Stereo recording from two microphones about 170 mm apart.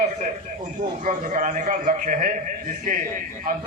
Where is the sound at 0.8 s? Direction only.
50° right (ahead or behind).